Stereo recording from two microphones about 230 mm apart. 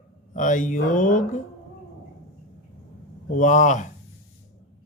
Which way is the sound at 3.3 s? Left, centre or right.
Left.